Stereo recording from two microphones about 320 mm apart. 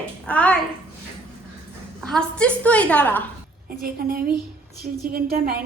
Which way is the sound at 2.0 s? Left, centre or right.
Centre.